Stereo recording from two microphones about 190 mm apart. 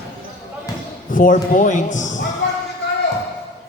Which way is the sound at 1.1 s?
45° left (ahead or behind).